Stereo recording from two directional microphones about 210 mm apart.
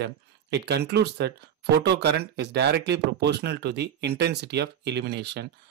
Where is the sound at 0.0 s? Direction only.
55° right (ahead or behind).